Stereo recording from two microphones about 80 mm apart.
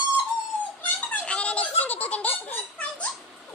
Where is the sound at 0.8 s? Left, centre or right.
Centre.